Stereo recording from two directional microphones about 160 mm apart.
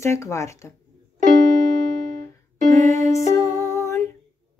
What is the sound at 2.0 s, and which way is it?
Music, 55° right (ahead or behind).